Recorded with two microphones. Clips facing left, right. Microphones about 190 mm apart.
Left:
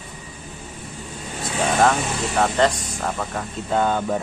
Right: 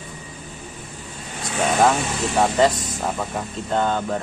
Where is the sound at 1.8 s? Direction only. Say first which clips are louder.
Even; 5° right (ahead or behind).